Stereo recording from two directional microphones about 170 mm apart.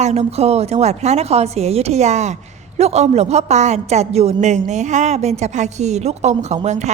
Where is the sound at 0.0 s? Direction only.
40° right (ahead or behind).